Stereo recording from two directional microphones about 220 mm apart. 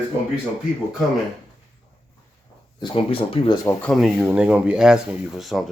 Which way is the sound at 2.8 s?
20° left (ahead or behind).